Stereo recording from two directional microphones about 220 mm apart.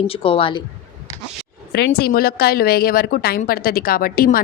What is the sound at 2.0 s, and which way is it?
A woman's voice, 45° left (ahead or behind).